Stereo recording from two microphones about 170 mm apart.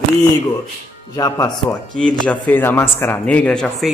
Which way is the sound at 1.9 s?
5° left (ahead or behind).